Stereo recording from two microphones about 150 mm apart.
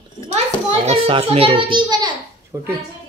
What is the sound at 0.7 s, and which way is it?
A child's voice, 45° right (ahead or behind).